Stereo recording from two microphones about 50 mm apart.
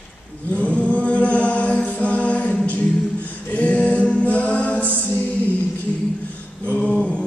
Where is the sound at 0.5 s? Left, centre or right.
Left.